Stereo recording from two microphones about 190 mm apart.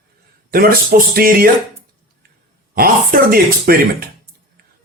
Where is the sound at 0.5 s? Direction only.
50° right (ahead or behind).